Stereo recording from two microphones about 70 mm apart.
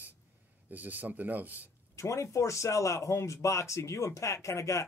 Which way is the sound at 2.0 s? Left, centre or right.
Left.